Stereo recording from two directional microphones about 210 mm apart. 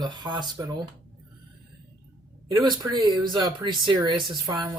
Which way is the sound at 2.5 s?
20° right (ahead or behind).